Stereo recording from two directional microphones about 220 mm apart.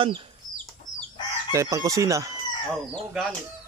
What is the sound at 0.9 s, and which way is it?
Chicken, 60° left (ahead or behind).